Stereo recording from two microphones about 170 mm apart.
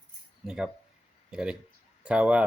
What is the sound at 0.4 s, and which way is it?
Speech, 5° right (ahead or behind).